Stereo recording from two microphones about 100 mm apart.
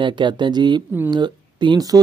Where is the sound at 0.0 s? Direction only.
50° right (ahead or behind).